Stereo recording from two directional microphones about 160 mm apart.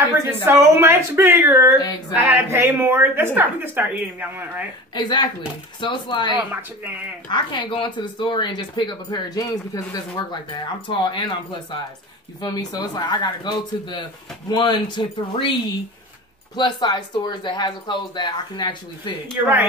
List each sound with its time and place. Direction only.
0.3 s speech: 15° right (ahead or behind)
1.8 s speech: 25° left (ahead or behind)
2.1 s speech: 15° right (ahead or behind)
4.9 s speech: 25° left (ahead or behind)
12.4 s speech: 25° left (ahead or behind)
16.5 s speech: 25° left (ahead or behind)
19.4 s speech: 10° right (ahead or behind)